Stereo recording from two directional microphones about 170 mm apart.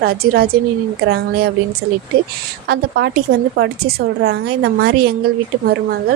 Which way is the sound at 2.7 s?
80° right.